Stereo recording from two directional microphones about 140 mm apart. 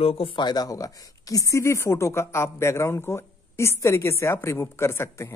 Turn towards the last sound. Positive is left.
turn(degrees=20)  # may be behind; listen again after turning